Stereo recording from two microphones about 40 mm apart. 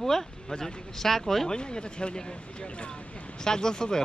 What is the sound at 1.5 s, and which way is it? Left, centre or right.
Speech, left.